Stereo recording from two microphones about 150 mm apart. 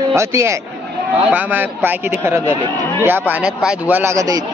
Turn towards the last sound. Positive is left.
turn(degrees=-20)  # may be behind; listen again after turning